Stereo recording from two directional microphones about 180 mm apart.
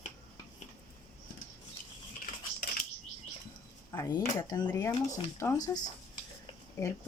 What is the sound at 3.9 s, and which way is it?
Speech, 20° left (ahead or behind).